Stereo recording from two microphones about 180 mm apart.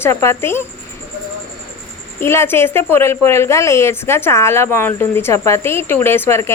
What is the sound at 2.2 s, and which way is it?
A woman's voice, 15° left (ahead or behind).